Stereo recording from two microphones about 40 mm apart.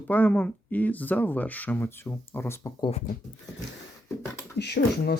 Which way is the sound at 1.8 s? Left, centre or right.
Left.